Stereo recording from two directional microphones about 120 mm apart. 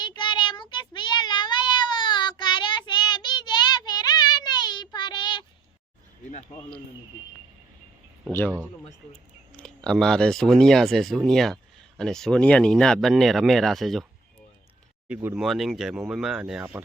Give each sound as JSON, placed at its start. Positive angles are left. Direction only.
{"t": 0.0, "sound": "child singing", "side_deg": 40}
{"t": 9.6, "sound": "speech", "side_deg": 5}
{"t": 15.0, "sound": "speech", "side_deg": -15}
{"t": 15.4, "sound": "speech", "side_deg": 0}